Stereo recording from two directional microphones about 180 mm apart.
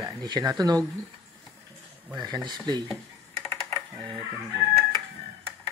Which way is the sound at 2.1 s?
20° right (ahead or behind).